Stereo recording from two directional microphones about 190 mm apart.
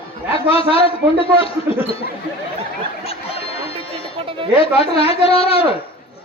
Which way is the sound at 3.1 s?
30° left (ahead or behind).